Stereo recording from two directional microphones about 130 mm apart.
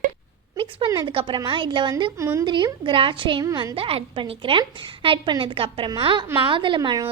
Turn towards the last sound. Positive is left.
turn(degrees=-35)  # may be behind; listen again after turning